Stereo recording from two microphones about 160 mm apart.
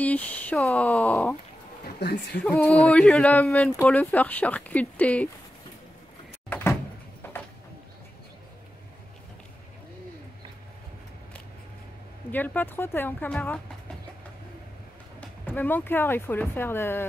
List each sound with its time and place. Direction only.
0.0 s speech: 10° left (ahead or behind)
2.0 s a woman's voice: 90° left
2.4 s speech: 5° left (ahead or behind)
6.5 s door: 15° left (ahead or behind)
12.3 s speech: 10° left (ahead or behind)
15.1 s speech: 10° left (ahead or behind)